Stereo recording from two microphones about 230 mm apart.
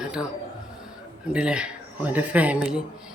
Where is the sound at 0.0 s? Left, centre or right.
Centre.